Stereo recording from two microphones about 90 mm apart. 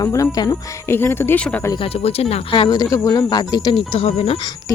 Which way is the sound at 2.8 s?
40° left (ahead or behind).